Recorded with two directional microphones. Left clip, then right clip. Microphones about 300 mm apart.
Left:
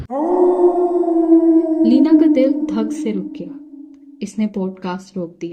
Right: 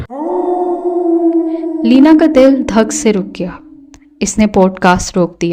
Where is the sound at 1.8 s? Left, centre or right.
Right.